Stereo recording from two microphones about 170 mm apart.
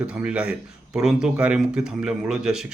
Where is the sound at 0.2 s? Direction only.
5° right (ahead or behind).